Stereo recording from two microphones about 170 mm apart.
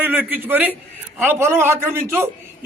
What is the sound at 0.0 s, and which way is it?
A man's voice, 10° right (ahead or behind).